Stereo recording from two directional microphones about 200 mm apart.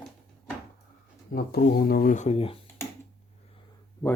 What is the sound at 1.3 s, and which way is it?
Speech, 50° left (ahead or behind).